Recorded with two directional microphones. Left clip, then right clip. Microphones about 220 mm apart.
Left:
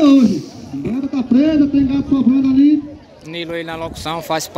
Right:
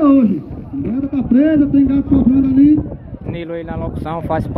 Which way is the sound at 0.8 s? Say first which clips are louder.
Even; 45° right (ahead or behind).